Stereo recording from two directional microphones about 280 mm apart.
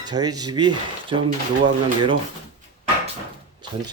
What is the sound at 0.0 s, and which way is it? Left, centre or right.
Speech, centre.